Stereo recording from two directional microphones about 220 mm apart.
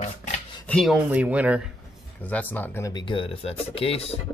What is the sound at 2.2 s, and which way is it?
Speech, 5° left (ahead or behind).